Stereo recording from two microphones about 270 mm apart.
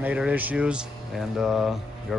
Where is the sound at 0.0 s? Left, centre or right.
Centre.